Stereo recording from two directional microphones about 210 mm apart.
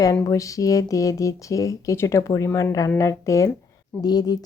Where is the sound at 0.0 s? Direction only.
15° left (ahead or behind).